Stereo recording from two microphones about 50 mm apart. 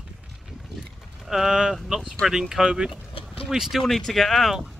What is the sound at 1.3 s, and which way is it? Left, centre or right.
Speech, centre.